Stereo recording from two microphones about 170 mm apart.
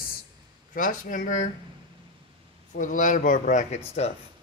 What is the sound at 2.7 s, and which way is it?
Speech, 50° left (ahead or behind).